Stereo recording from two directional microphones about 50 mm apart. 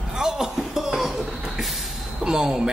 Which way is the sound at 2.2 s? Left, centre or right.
Centre.